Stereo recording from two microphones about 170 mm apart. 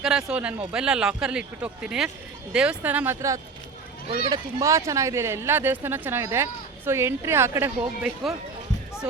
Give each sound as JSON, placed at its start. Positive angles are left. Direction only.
{"t": 0.0, "sound": "a man's voice", "side_deg": -5}